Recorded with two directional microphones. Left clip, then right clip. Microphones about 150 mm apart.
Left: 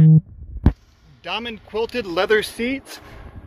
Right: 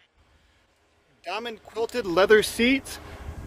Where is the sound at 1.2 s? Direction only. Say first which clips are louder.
Left 5 dB; 25° right (ahead or behind).